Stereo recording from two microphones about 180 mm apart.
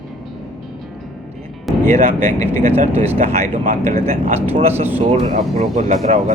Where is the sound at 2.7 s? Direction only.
35° right (ahead or behind).